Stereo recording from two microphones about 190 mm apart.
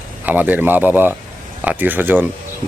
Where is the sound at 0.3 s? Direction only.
10° right (ahead or behind).